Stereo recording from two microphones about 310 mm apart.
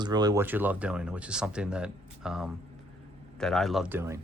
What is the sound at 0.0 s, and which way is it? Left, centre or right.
Speech, centre.